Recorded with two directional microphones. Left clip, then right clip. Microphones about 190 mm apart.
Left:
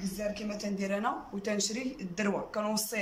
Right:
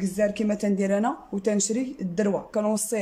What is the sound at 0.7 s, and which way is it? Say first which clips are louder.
Speech: right 6 dB; 35° right (ahead or behind).